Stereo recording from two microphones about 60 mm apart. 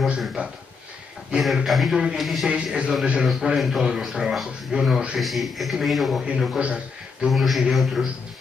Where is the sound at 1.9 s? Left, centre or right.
Centre.